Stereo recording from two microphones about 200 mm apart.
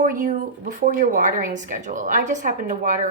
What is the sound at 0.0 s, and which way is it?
A woman's voice, 40° right (ahead or behind).